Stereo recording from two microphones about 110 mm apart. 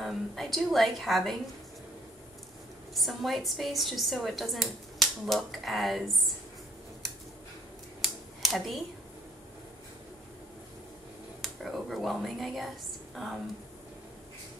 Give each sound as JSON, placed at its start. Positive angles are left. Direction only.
{"t": 0.0, "sound": "a woman's voice", "side_deg": 0}
{"t": 2.9, "sound": "a woman's voice", "side_deg": 0}
{"t": 8.0, "sound": "a sound", "side_deg": 0}
{"t": 11.4, "sound": "a woman's voice", "side_deg": 0}